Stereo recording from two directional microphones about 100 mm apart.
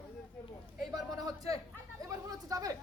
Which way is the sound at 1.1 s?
35° right (ahead or behind).